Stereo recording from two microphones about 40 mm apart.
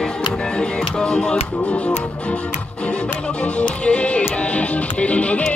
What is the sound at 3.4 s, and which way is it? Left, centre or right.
Music, left.